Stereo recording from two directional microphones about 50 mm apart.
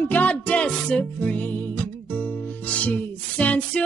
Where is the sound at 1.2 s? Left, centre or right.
Left.